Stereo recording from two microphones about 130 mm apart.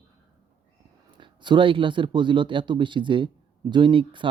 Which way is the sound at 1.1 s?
35° right (ahead or behind).